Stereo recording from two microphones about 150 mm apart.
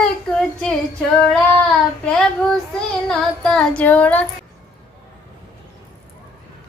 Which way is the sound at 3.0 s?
5° left (ahead or behind).